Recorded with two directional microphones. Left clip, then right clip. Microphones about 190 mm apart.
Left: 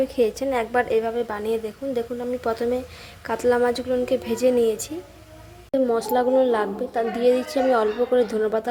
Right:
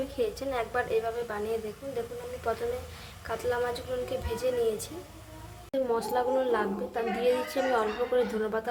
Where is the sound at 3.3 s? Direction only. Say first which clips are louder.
Left 10 dB; 35° left (ahead or behind).